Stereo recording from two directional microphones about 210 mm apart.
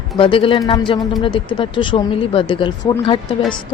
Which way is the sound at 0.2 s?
25° left (ahead or behind).